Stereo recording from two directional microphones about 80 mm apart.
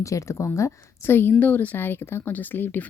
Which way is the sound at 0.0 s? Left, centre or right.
Left.